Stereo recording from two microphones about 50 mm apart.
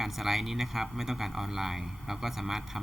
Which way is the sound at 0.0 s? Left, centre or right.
Centre.